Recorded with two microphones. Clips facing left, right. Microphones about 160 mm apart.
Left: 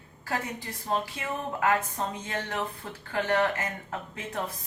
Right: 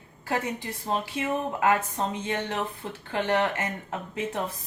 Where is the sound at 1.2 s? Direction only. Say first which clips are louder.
Right 4 dB; 25° right (ahead or behind).